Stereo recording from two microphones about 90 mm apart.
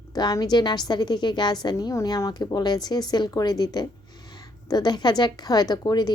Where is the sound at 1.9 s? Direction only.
40° left (ahead or behind).